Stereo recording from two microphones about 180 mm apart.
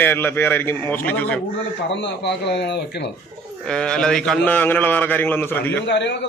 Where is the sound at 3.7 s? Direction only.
5° left (ahead or behind).